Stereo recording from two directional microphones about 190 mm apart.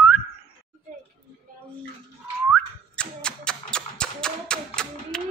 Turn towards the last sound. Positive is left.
turn(degrees=5)  # may be behind; listen again after turning